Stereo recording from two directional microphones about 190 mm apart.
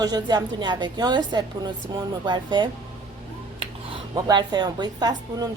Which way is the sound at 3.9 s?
20° right (ahead or behind).